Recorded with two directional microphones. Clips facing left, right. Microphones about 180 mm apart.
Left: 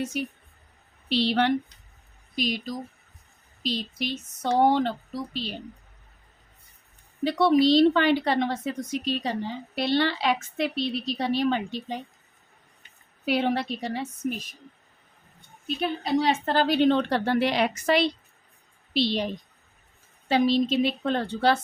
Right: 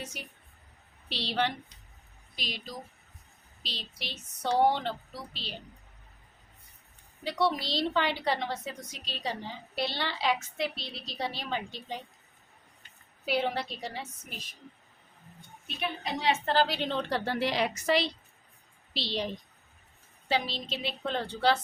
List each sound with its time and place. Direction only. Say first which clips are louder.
1.3 s a woman's voice: left 6 dB; 60° left (ahead or behind)
2.3 s a woman's voice: left 11 dB; 50° left (ahead or behind)
7.3 s a woman's voice: left 10 dB; 60° left (ahead or behind)
13.2 s a woman's voice: left 5 dB; 60° left (ahead or behind)
15.6 s a woman's voice: left 7 dB; 35° left (ahead or behind); by 21.6 s 55° left (ahead or behind)